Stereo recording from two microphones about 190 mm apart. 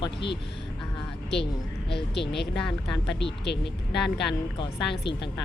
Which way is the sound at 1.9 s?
60° left (ahead or behind).